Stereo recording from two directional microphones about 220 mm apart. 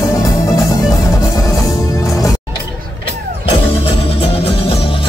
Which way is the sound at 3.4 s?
25° left (ahead or behind).